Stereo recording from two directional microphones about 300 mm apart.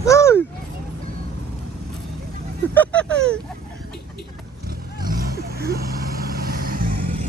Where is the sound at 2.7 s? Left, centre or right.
Centre.